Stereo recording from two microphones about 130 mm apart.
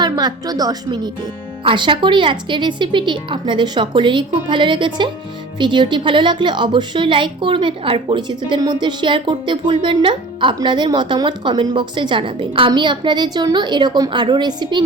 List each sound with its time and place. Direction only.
0.0 s a woman's voice: 30° right (ahead or behind)